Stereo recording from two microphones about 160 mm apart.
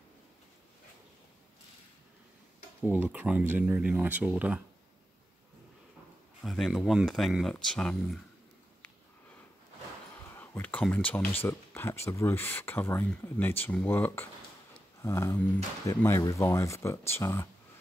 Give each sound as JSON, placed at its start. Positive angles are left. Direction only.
{"t": 2.8, "sound": "speech", "side_deg": -10}
{"t": 6.4, "sound": "speech", "side_deg": 0}
{"t": 10.3, "sound": "speech", "side_deg": 10}